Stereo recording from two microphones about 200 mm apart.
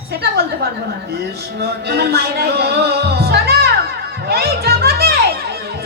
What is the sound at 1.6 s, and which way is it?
Music, 55° right (ahead or behind).